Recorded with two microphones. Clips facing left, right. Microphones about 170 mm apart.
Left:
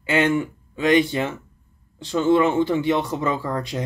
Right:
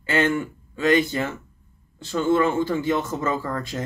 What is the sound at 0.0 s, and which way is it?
Speech, 15° left (ahead or behind).